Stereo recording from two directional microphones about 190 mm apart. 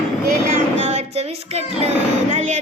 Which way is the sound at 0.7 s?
35° right (ahead or behind).